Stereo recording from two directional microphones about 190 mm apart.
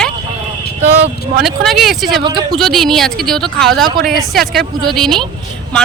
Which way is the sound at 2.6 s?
Centre (ahead or behind).